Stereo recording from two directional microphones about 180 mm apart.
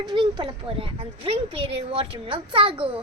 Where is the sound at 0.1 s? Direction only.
25° right (ahead or behind).